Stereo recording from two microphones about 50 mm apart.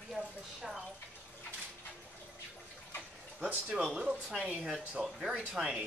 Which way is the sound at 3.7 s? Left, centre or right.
Right.